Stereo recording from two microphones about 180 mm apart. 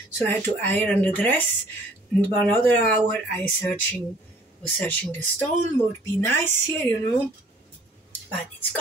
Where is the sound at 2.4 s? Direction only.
10° left (ahead or behind).